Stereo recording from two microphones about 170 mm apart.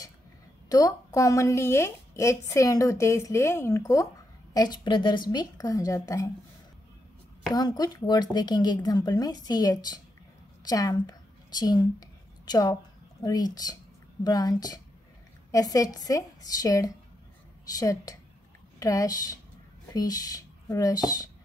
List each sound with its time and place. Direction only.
0.7 s a woman's voice: 20° left (ahead or behind)
7.5 s speech: 25° left (ahead or behind)